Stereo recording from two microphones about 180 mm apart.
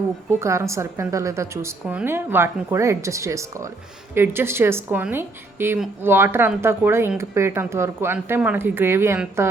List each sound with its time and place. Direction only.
0.3 s speech: 15° right (ahead or behind)